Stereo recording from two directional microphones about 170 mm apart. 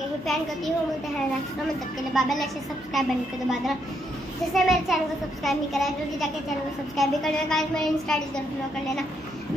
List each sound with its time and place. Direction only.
2.1 s a child's voice: centre (ahead or behind)